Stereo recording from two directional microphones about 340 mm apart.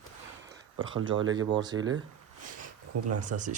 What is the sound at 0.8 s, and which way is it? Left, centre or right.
Speech, right.